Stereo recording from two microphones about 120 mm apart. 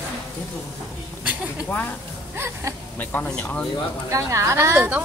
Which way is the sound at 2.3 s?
20° right (ahead or behind).